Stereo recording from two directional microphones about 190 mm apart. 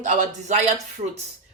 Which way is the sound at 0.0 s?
40° right (ahead or behind).